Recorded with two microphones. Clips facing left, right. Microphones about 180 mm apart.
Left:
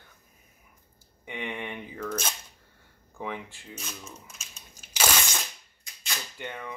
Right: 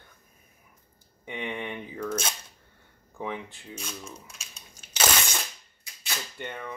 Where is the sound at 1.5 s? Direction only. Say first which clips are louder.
Right 2 dB; 15° left (ahead or behind).